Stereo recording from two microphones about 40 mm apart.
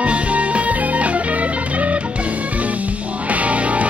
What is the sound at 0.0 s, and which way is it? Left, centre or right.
Music, right.